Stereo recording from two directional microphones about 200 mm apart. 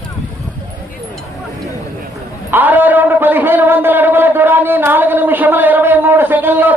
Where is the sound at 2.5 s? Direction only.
10° right (ahead or behind).